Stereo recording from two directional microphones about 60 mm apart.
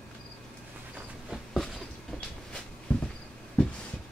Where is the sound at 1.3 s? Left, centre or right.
Centre.